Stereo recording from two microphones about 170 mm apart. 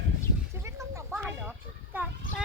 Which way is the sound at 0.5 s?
15° right (ahead or behind).